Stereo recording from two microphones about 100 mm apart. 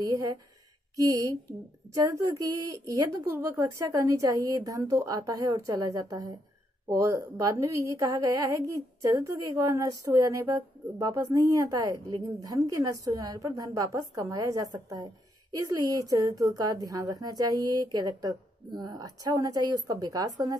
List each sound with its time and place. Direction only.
0.0 s a woman's voice: 40° right (ahead or behind)